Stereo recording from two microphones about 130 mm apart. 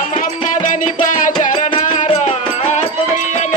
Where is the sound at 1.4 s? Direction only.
70° left (ahead or behind).